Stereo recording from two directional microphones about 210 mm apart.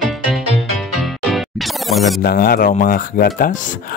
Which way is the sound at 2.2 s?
45° left (ahead or behind).